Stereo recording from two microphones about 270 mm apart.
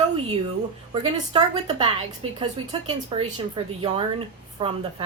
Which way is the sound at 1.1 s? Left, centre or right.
Centre.